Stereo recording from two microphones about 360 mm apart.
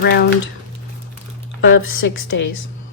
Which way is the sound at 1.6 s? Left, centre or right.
Left.